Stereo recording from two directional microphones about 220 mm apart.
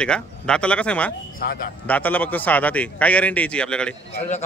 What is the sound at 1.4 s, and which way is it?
Speech, 40° left (ahead or behind).